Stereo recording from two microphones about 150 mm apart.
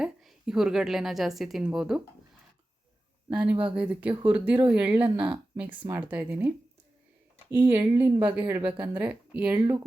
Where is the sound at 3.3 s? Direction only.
5° right (ahead or behind).